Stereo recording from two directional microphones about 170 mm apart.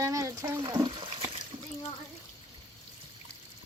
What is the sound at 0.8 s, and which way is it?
Water, 30° right (ahead or behind).